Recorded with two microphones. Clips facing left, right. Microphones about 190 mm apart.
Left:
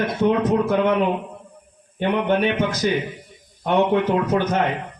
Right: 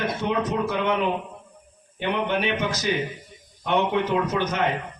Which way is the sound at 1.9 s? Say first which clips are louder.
Left 5 dB; 50° left (ahead or behind).